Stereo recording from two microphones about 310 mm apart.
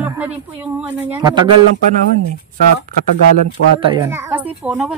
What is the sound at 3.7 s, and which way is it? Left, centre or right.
Speech, centre.